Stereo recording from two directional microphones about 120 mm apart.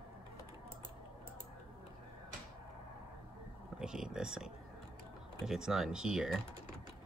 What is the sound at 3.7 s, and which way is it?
Speech, 5° right (ahead or behind).